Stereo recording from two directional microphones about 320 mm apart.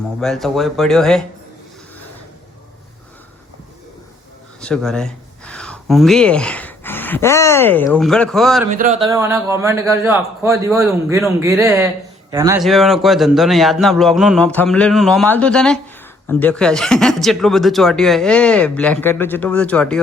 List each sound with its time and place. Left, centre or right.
0.2 s speech: centre
4.6 s speech: centre
8.7 s speech: right
9.0 s a man's voice: centre